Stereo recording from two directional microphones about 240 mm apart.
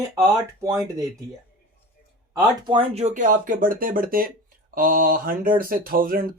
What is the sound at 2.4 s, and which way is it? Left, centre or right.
Speech, centre.